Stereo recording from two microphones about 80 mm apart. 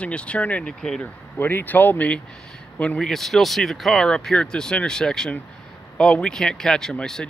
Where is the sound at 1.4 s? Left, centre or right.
Left.